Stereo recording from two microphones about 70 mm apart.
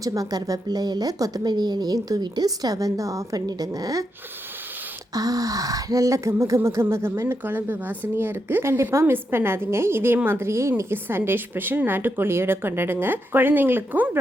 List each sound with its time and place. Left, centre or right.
0.0 s speech: right
5.1 s a woman's voice: right
8.6 s a woman's voice: right